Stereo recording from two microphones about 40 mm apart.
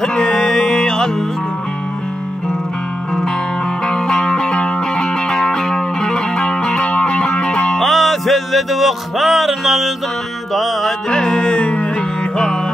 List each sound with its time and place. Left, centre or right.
0.0 s music: centre
3.8 s music: centre
7.8 s music: centre
11.1 s music: left